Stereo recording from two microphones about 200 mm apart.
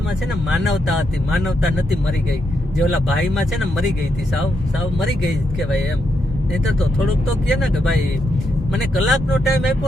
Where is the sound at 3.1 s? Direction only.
Centre (ahead or behind).